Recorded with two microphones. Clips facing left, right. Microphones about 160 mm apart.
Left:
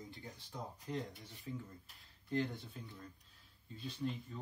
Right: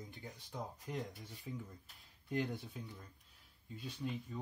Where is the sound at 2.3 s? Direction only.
15° right (ahead or behind).